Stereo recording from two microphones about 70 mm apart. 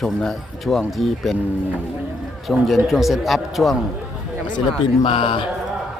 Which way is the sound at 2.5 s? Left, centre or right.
Centre.